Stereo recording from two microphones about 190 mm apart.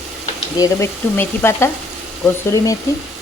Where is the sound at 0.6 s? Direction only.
15° left (ahead or behind).